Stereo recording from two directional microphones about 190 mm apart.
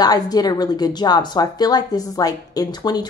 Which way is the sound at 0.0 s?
20° left (ahead or behind).